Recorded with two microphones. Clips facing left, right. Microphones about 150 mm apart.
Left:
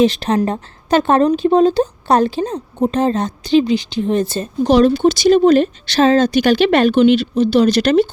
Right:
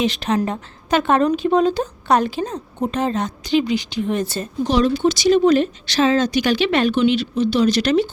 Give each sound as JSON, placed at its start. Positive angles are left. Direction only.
{"t": 0.0, "sound": "speech", "side_deg": 35}
{"t": 4.6, "sound": "speech", "side_deg": 55}